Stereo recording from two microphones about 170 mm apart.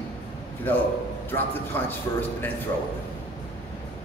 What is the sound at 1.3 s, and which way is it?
Speech, 10° left (ahead or behind).